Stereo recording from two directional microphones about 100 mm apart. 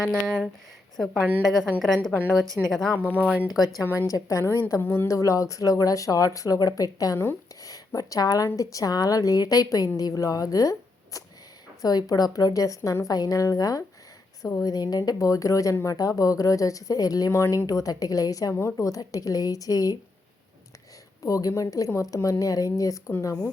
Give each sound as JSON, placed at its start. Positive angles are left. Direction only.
{"t": 0.0, "sound": "a woman's voice", "side_deg": 5}
{"t": 3.1, "sound": "speech", "side_deg": -15}
{"t": 4.0, "sound": "speech", "side_deg": 30}
{"t": 21.2, "sound": "speech", "side_deg": 35}